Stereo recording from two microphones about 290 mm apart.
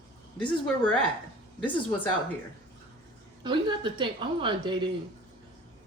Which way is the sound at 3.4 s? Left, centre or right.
Centre.